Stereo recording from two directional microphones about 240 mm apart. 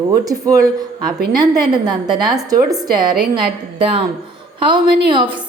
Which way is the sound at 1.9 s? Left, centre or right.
Centre.